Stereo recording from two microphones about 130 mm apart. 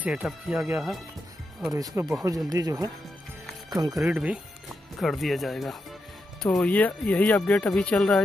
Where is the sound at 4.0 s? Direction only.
5° right (ahead or behind).